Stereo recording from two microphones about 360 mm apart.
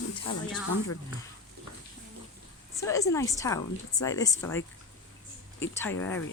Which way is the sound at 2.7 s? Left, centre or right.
Centre.